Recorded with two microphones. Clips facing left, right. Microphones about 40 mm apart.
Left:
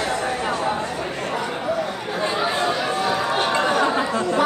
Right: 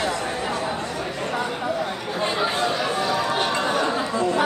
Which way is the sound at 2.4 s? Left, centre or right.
Centre.